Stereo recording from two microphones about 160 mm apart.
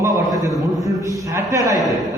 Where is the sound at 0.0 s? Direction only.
20° right (ahead or behind).